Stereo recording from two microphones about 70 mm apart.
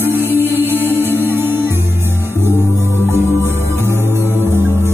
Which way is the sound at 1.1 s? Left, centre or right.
Right.